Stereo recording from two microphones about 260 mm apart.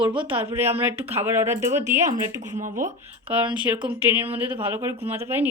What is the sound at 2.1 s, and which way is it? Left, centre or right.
Speech, right.